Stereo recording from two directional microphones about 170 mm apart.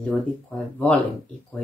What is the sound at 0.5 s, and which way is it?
Speech, 10° left (ahead or behind).